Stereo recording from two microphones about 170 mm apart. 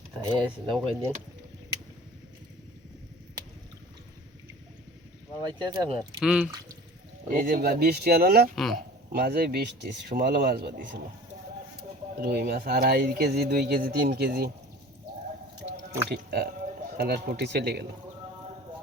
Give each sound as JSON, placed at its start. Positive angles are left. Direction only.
{"t": 0.2, "sound": "speech", "side_deg": -20}
{"t": 5.4, "sound": "speech", "side_deg": -20}
{"t": 6.2, "sound": "speech", "side_deg": -5}
{"t": 7.3, "sound": "speech", "side_deg": -55}
{"t": 8.5, "sound": "speech", "side_deg": 0}
{"t": 9.1, "sound": "speech", "side_deg": -65}
{"t": 12.1, "sound": "speech", "side_deg": -65}
{"t": 16.0, "sound": "speech", "side_deg": -65}